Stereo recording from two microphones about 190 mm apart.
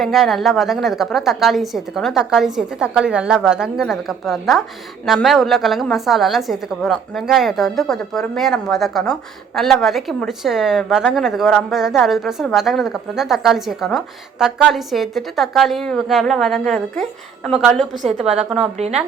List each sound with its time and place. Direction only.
0.0 s a woman's voice: centre (ahead or behind)
17.9 s a woman's voice: 35° right (ahead or behind)